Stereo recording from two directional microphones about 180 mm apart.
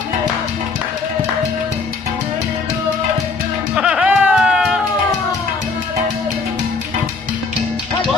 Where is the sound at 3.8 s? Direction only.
5° right (ahead or behind).